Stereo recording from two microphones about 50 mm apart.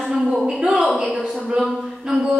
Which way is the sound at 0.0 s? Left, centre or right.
Centre.